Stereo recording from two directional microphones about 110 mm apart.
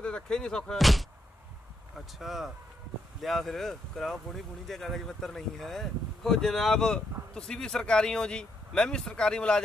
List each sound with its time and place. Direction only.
0.0 s speech: 10° left (ahead or behind)